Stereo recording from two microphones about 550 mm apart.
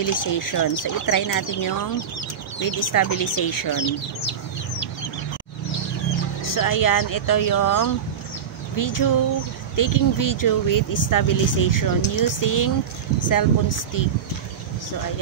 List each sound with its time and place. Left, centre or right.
0.0 s speech: left
6.4 s speech: left